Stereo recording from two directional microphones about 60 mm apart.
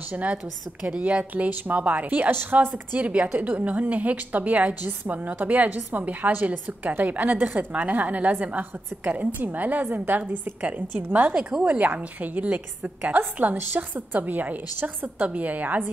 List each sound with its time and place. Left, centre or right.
0.1 s a woman's voice: right
11.3 s a woman's voice: centre